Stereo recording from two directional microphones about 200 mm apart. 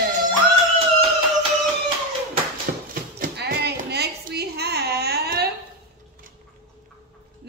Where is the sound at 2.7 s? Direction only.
50° right (ahead or behind).